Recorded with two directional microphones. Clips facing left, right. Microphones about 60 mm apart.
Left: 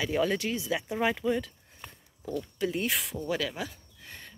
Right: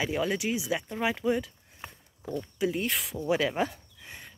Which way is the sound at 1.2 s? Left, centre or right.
Centre.